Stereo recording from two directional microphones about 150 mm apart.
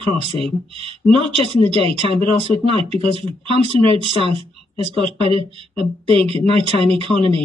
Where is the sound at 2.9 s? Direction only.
40° right (ahead or behind).